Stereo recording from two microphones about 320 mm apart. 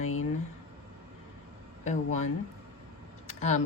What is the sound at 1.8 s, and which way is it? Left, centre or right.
Speech, left.